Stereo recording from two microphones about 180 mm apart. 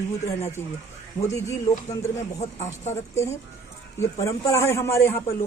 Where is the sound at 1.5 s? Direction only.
20° left (ahead or behind).